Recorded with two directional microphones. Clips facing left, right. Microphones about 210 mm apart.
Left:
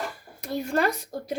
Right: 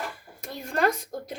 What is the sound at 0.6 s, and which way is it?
Speech, centre (ahead or behind).